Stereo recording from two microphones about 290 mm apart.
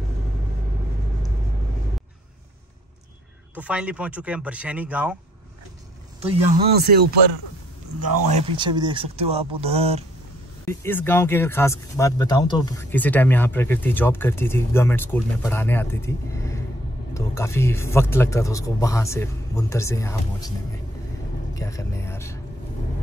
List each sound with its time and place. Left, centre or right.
3.5 s speech: centre
6.5 s speech: right
8.5 s speech: centre
10.6 s speech: centre
21.5 s a sound: centre